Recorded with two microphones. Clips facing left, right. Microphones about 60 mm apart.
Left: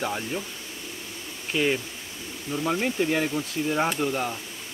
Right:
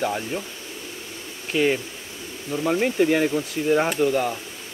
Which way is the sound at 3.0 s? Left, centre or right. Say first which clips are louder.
Right 7 dB; right.